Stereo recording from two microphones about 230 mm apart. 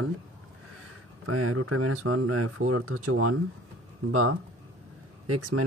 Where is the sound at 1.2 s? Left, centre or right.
Right.